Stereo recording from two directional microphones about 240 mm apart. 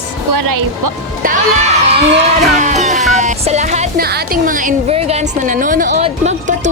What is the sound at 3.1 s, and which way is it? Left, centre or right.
Music, right.